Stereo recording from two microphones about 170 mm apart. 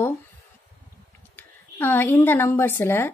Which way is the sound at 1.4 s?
15° left (ahead or behind).